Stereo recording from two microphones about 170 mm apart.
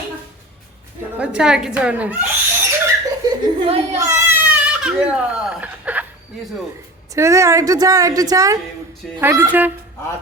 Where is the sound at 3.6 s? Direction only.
35° right (ahead or behind).